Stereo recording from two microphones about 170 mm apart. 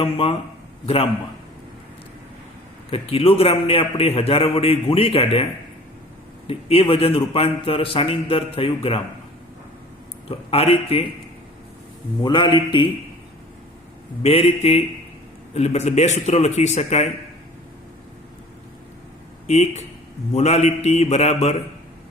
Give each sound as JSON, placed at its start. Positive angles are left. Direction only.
{"t": 0.0, "sound": "a man's voice", "side_deg": 35}
{"t": 2.9, "sound": "a man's voice", "side_deg": 35}
{"t": 6.5, "sound": "a man's voice", "side_deg": 35}
{"t": 10.2, "sound": "a man's voice", "side_deg": 35}
{"t": 12.2, "sound": "a man's voice", "side_deg": 25}
{"t": 14.2, "sound": "a man's voice", "side_deg": 35}
{"t": 19.5, "sound": "a man's voice", "side_deg": 40}